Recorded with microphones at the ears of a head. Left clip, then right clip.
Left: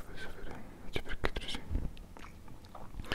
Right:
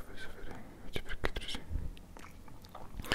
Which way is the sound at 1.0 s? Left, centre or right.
Centre.